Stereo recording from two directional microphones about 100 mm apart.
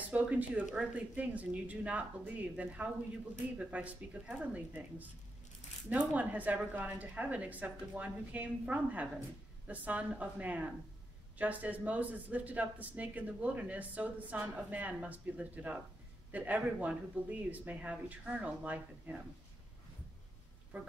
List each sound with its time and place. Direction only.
0.1 s speech: 15° right (ahead or behind)
20.7 s speech: 15° right (ahead or behind)